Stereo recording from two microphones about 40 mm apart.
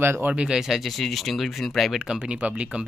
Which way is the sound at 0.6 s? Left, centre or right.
Centre.